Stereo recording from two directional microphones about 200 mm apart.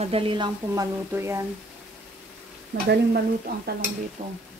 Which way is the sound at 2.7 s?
60° right (ahead or behind).